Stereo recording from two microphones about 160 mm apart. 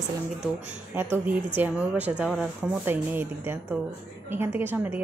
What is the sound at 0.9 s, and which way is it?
Speech, 10° right (ahead or behind).